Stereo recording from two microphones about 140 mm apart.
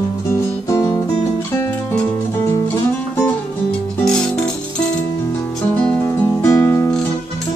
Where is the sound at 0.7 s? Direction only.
25° left (ahead or behind).